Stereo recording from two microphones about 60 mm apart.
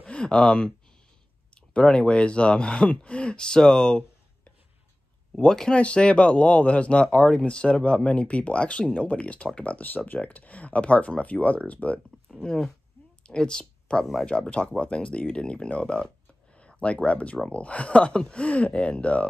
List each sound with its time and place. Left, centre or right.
0.0 s a sound: centre
1.5 s speech: centre
5.3 s speech: centre
12.3 s speech: centre
13.2 s a sound: centre
14.2 s speech: centre